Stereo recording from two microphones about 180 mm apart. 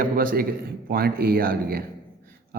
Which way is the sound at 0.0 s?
50° right (ahead or behind).